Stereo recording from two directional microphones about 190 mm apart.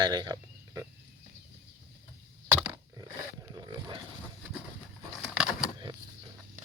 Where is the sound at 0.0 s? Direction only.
20° right (ahead or behind).